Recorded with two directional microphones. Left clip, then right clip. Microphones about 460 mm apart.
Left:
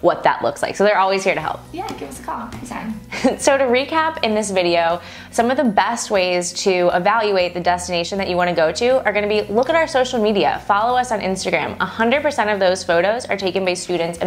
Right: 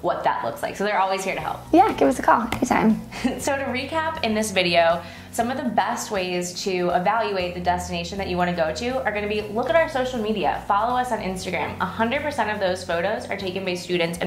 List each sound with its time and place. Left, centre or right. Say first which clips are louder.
0.0 s a woman's voice: left 7 dB; left
1.7 s a woman's voice: right 12 dB; right
3.3 s a woman's voice: left 10 dB; left
4.4 s a woman's voice: left 1 dB; left
13.8 s a woman's voice: left 3 dB; left